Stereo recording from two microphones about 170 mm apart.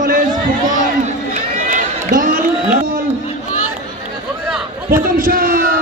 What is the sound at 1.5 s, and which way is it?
Run, 50° right (ahead or behind).